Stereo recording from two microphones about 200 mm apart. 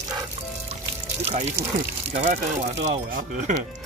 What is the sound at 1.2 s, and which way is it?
Speech, 30° right (ahead or behind).